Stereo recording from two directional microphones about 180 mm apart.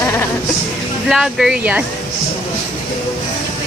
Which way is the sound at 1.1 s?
Centre (ahead or behind).